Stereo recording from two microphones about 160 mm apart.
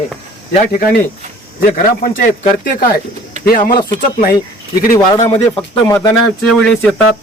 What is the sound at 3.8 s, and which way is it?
Speech, 30° left (ahead or behind).